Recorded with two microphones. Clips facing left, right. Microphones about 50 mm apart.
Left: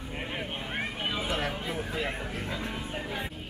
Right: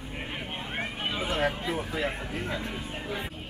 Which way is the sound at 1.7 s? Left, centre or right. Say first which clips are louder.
Right 2 dB; centre.